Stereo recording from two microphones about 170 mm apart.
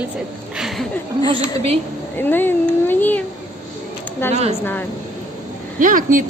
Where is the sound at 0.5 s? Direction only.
Centre (ahead or behind).